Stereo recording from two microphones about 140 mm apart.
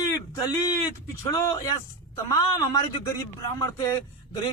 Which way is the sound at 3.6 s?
25° left (ahead or behind).